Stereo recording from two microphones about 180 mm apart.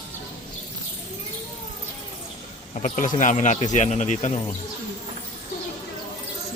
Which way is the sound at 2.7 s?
45° left (ahead or behind).